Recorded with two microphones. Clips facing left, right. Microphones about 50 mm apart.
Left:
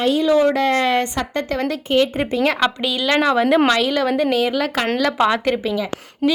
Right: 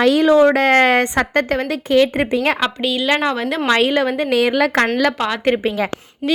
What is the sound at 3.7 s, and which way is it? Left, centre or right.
Speech, right.